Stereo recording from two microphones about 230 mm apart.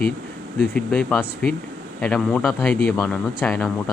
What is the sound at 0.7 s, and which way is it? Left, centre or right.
Speech, centre.